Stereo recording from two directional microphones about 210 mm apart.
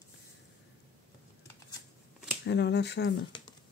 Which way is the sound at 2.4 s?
55° left (ahead or behind).